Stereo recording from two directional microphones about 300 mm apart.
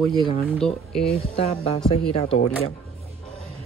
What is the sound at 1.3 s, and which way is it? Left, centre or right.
Speech, left.